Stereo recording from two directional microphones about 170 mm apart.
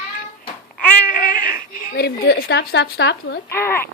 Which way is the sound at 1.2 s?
55° left (ahead or behind).